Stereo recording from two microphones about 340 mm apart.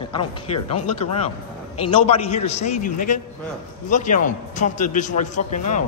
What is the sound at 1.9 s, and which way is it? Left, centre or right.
A man's voice, centre.